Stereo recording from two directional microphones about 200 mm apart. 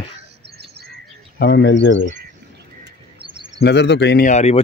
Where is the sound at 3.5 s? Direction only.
60° left (ahead or behind).